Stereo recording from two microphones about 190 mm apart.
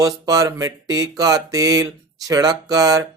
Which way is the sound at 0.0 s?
20° right (ahead or behind).